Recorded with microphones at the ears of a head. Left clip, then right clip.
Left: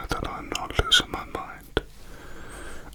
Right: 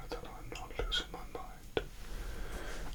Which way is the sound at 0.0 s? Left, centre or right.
Left.